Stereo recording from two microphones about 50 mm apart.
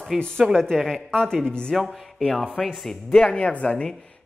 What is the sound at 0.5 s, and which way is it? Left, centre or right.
Speech, centre.